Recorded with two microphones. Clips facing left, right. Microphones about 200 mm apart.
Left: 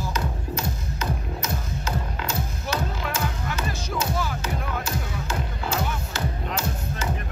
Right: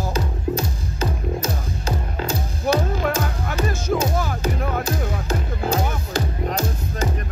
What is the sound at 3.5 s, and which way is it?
Music, 50° right (ahead or behind).